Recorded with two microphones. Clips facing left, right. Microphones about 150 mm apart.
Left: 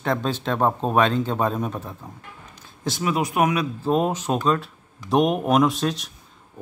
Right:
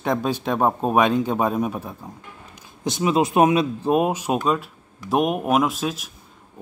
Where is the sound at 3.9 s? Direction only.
10° right (ahead or behind).